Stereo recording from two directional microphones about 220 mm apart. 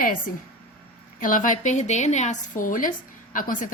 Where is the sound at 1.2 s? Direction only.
35° left (ahead or behind).